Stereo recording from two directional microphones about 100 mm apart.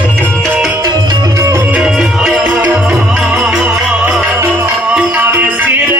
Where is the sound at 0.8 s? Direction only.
35° right (ahead or behind).